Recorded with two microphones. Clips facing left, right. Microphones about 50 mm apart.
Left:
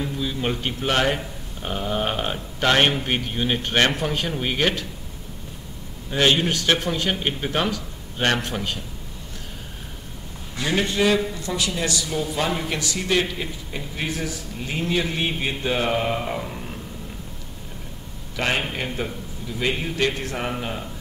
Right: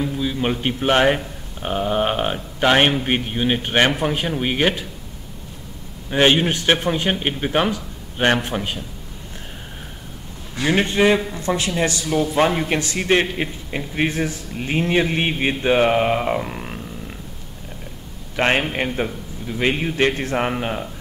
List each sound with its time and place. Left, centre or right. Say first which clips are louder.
0.0 s a man's voice: right 4 dB; centre
6.0 s a man's voice: right 3 dB; right
10.5 s a man's voice: right 4 dB; right
18.3 s a man's voice: right 5 dB; right